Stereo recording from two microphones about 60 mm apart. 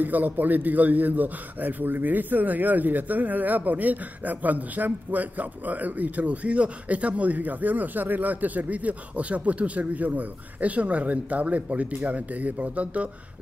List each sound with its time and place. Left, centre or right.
0.0 s a man's voice: right